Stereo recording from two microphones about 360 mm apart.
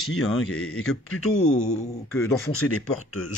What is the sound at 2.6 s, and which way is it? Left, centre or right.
Speech, left.